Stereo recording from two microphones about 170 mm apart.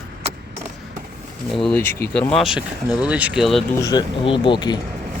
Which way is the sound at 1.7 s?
15° left (ahead or behind).